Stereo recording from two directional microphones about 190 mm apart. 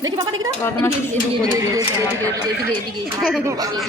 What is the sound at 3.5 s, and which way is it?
Speech, 20° right (ahead or behind).